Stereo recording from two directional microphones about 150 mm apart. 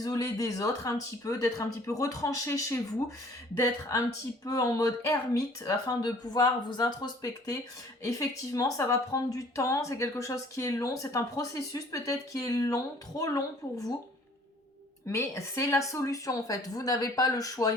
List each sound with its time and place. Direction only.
0.0 s speech: 25° left (ahead or behind)
15.0 s speech: 20° left (ahead or behind)